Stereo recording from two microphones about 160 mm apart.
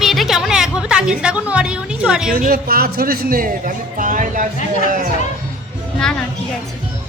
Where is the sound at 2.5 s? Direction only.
70° right (ahead or behind).